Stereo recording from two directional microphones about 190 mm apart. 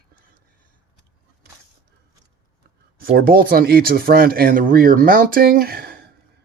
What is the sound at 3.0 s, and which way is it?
Speech, 50° right (ahead or behind).